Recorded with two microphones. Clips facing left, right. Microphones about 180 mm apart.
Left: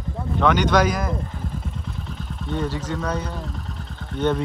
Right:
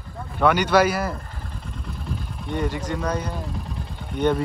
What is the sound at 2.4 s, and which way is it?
Speech, 10° right (ahead or behind).